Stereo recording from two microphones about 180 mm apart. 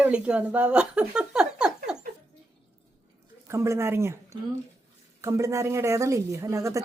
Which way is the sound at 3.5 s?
15° right (ahead or behind).